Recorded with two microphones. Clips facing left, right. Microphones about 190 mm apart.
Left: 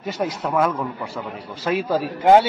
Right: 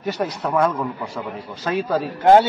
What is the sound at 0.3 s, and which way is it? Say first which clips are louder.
Speech: right 1 dB; centre (ahead or behind).